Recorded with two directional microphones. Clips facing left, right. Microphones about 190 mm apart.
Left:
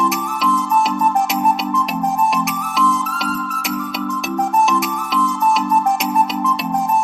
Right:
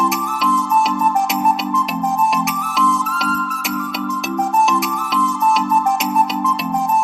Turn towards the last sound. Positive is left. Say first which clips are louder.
# even
turn(degrees=0)  # may be behind; listen again after turning